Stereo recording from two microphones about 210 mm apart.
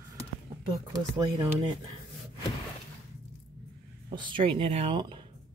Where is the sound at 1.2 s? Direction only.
20° right (ahead or behind).